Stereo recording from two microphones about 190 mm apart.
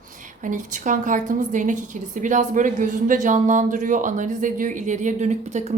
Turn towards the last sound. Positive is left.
turn(degrees=-40)  # may be behind; listen again after turning